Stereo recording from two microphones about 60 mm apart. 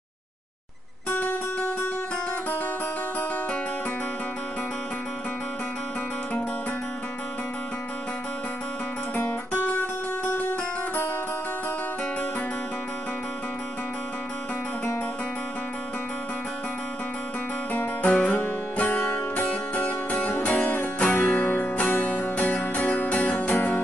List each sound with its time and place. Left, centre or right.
1.1 s music: left
9.1 s music: left
17.7 s music: left